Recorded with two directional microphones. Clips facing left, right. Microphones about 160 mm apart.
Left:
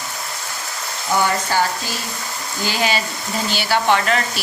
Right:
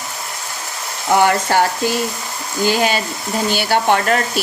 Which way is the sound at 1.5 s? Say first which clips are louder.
Right 3 dB; 60° right (ahead or behind).